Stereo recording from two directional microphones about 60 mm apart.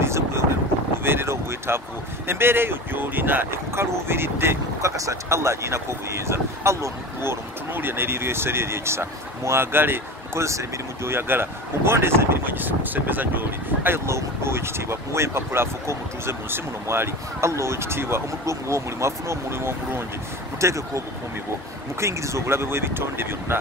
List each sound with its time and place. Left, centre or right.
0.0 s vehicle: right
1.0 s wind noise: right
2.2 s speech: right
4.8 s speech: right
10.4 s speech: right
11.1 s speech: right
18.4 s speech: right
20.6 s speech: right
22.0 s speech: right